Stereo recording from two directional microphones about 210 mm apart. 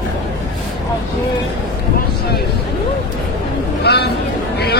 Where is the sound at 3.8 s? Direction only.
50° left (ahead or behind).